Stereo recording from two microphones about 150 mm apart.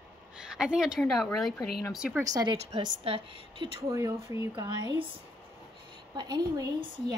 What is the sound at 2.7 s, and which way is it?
Speech, 40° right (ahead or behind).